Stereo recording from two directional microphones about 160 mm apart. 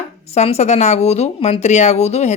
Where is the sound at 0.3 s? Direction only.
40° left (ahead or behind).